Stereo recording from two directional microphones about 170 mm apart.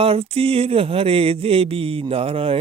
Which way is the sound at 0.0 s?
35° right (ahead or behind).